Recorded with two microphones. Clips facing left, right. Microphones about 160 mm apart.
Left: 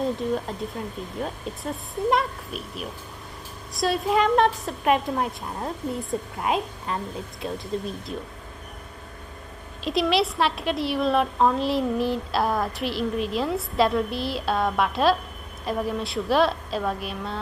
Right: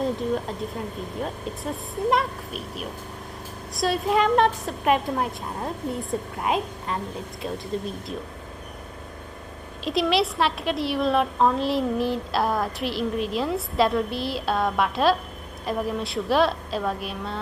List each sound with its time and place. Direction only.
0.0 s a woman's voice: centre (ahead or behind)
9.8 s a woman's voice: centre (ahead or behind)